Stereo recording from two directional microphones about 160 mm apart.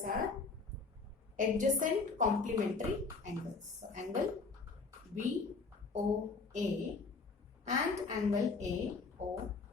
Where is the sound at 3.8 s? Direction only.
55° right (ahead or behind).